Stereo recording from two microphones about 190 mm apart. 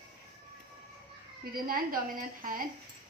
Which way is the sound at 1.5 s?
50° right (ahead or behind).